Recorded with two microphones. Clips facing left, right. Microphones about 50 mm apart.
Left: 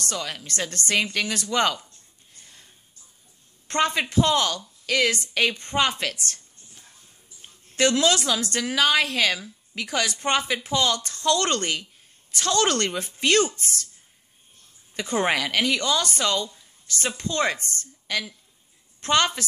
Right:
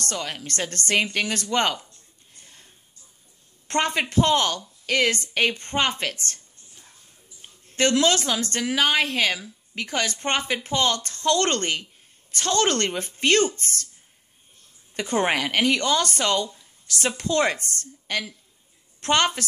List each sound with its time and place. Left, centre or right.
0.0 s a woman's voice: right
3.6 s a woman's voice: right
7.9 s speech: right
15.0 s a woman's voice: right
16.9 s speech: right
17.5 s a woman's voice: right